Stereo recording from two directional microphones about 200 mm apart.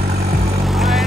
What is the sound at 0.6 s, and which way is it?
Vehicle, centre (ahead or behind).